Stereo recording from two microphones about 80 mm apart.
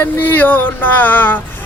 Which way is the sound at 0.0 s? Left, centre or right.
Left.